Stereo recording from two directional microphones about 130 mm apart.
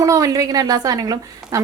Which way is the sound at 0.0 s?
25° right (ahead or behind).